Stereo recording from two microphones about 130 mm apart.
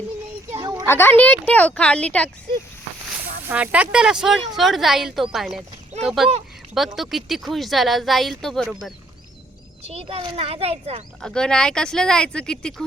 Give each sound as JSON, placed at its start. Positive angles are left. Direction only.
{"t": 0.5, "sound": "a sound", "side_deg": -30}
{"t": 0.9, "sound": "speech", "side_deg": 20}
{"t": 3.5, "sound": "speech", "side_deg": -10}
{"t": 9.8, "sound": "a child's voice", "side_deg": -50}
{"t": 11.2, "sound": "speech", "side_deg": 5}